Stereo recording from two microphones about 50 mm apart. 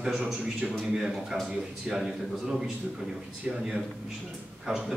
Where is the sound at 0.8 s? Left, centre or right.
Centre.